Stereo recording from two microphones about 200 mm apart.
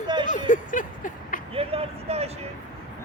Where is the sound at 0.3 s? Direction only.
40° left (ahead or behind).